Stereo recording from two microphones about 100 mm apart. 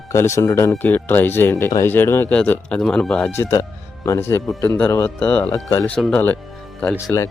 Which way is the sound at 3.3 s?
30° left (ahead or behind).